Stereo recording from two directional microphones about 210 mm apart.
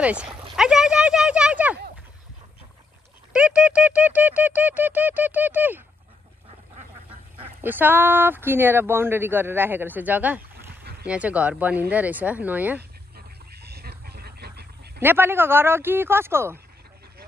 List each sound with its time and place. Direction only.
0.0 s speech: 5° right (ahead or behind)
0.6 s a sound: 5° right (ahead or behind)
3.3 s speech: 5° right (ahead or behind)
7.1 s duck: 25° right (ahead or behind)
7.6 s speech: 10° right (ahead or behind)
10.7 s boat: 50° right (ahead or behind)
11.1 s speech: 5° right (ahead or behind)
13.1 s a sound: 50° right (ahead or behind)
15.0 s speech: 10° right (ahead or behind)